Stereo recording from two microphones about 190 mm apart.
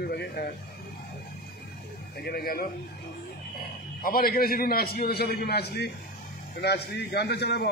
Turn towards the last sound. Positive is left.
turn(degrees=60)  # may be behind; listen again after turning